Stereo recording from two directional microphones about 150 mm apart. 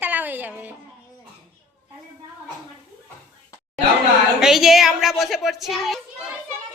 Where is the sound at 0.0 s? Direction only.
10° right (ahead or behind).